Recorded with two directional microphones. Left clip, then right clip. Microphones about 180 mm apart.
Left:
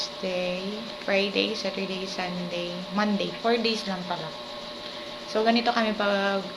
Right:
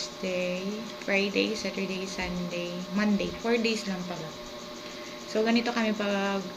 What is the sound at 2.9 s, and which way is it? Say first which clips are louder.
Speech: left 3 dB; 20° right (ahead or behind).